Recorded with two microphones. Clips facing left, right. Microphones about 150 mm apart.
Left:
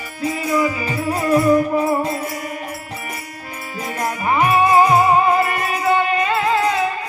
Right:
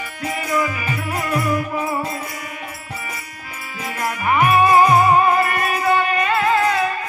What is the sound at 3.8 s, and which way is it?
Music, 35° left (ahead or behind).